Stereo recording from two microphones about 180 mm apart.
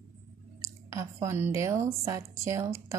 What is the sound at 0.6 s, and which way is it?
A woman's voice, 15° right (ahead or behind).